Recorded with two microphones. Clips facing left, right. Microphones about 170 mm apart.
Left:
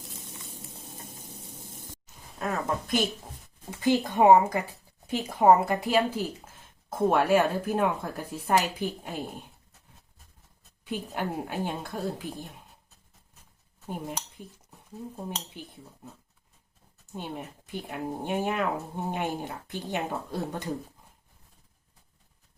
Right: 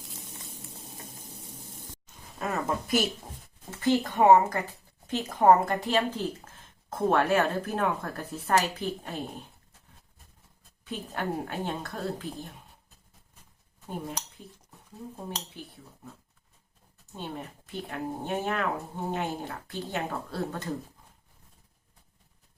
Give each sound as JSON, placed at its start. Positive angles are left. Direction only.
{"t": 2.4, "sound": "a woman's voice", "side_deg": 0}
{"t": 3.7, "sound": "speech", "side_deg": 15}
{"t": 10.8, "sound": "speech", "side_deg": 10}
{"t": 13.8, "sound": "dishes", "side_deg": 10}
{"t": 15.1, "sound": "speech", "side_deg": 15}
{"t": 17.2, "sound": "speech", "side_deg": 15}